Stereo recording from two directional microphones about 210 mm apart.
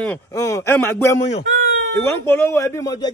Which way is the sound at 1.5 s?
45° right (ahead or behind).